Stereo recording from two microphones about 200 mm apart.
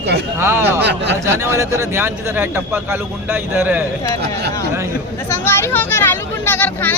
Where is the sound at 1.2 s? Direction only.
15° right (ahead or behind).